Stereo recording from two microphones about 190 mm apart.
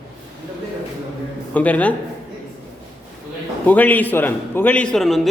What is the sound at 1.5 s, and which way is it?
Speech, 5° left (ahead or behind).